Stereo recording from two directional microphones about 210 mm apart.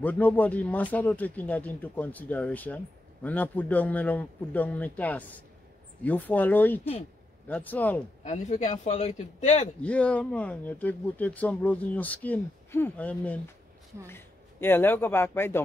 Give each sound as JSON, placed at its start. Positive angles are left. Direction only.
{"t": 0.0, "sound": "speech", "side_deg": 10}
{"t": 8.2, "sound": "a man's voice", "side_deg": 35}
{"t": 9.8, "sound": "speech", "side_deg": 5}